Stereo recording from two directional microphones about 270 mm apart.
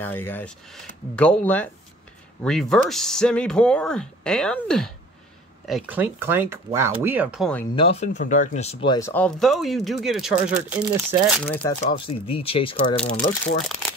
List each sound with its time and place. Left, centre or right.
0.0 s speech: centre
7.7 s speech: left; by 11.3 s centre
11.4 s speech: centre
13.1 s speech: left